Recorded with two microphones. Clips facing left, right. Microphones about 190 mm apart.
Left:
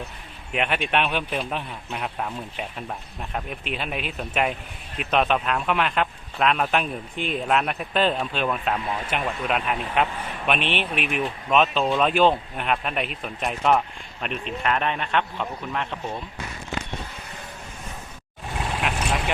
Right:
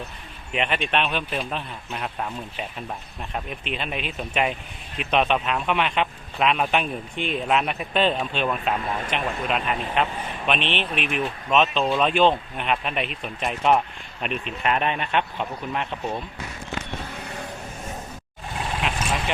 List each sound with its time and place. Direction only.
0.5 s speech: 5° left (ahead or behind); by 16.1 s 10° right (ahead or behind)